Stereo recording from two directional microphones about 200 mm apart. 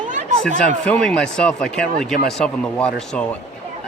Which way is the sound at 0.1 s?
40° right (ahead or behind).